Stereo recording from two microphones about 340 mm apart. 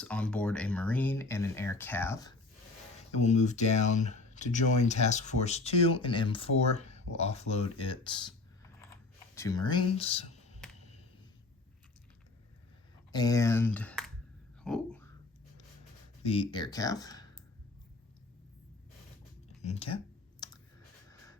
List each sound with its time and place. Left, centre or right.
0.0 s speech: centre
3.2 s speech: left
9.3 s speech: centre
13.1 s speech: centre
14.6 s a sound: centre
16.2 s speech: centre
19.6 s speech: centre
20.4 s clicking: centre